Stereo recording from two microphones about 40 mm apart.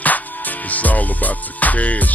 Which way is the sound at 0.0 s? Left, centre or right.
Left.